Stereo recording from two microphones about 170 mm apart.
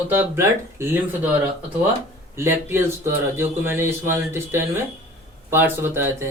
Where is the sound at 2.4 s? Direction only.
15° right (ahead or behind).